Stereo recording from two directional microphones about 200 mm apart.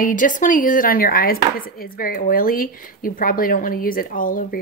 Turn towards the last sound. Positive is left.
turn(degrees=45)  # may be behind; listen again after turning